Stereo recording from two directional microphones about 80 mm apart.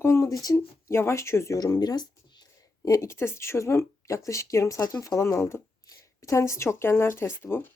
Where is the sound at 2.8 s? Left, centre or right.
Left.